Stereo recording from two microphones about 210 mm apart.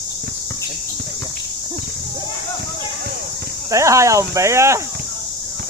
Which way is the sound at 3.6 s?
15° right (ahead or behind).